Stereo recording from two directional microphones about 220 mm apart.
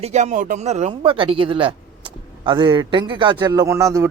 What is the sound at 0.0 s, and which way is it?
Speech, 30° right (ahead or behind).